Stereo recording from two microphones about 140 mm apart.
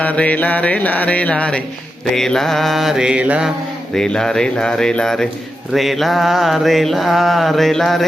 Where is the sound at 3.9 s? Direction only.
5° left (ahead or behind).